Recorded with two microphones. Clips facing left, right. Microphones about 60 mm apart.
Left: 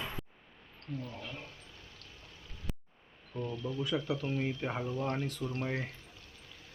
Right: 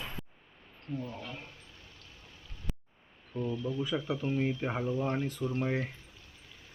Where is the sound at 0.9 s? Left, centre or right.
Centre.